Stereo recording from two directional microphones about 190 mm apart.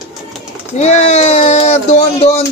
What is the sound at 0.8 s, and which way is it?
Speech, 35° left (ahead or behind).